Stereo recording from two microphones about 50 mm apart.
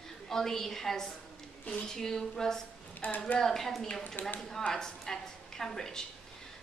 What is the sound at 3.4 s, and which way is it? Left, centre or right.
Speech, centre.